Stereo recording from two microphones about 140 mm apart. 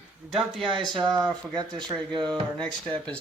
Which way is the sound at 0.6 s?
35° right (ahead or behind).